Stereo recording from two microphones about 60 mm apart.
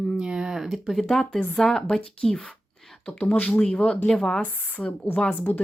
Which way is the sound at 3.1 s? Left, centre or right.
Left.